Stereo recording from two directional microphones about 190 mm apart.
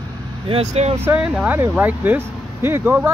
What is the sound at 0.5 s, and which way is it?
Speech, 35° right (ahead or behind).